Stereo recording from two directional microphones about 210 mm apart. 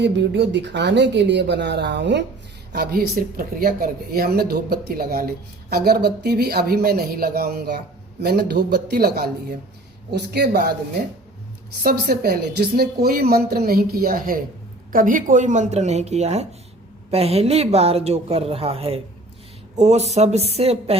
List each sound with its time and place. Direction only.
0.0 s a woman's voice: 55° right (ahead or behind)
11.8 s a woman's voice: 45° right (ahead or behind); by 20.9 s 30° right (ahead or behind)